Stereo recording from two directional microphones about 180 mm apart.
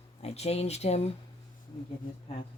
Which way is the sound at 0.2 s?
35° left (ahead or behind).